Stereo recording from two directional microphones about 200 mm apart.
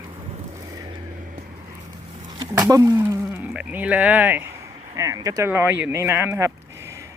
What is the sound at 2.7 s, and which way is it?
Speech, 15° right (ahead or behind).